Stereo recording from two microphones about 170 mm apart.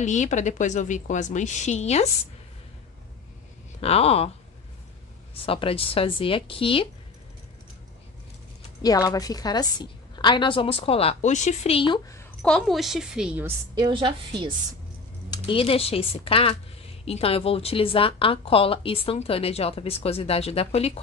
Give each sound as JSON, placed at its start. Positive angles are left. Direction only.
{"t": 0.0, "sound": "a woman's voice", "side_deg": 45}
{"t": 3.8, "sound": "speech", "side_deg": 35}
{"t": 5.3, "sound": "speech", "side_deg": 35}
{"t": 8.8, "sound": "a woman's voice", "side_deg": 20}
{"t": 12.4, "sound": "a woman's voice", "side_deg": 5}
{"t": 13.7, "sound": "a woman's voice", "side_deg": -30}
{"t": 15.2, "sound": "speech", "side_deg": 25}